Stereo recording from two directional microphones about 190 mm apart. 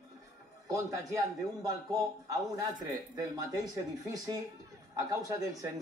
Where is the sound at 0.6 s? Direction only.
15° right (ahead or behind).